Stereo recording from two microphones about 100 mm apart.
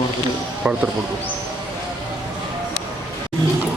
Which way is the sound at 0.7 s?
15° right (ahead or behind).